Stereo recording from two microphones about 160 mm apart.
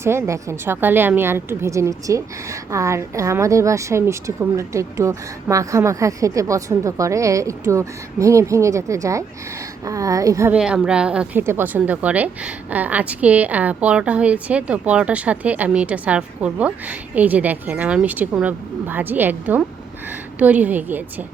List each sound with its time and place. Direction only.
0.0 s a woman's voice: 15° right (ahead or behind)
10.5 s a woman's voice: 5° right (ahead or behind)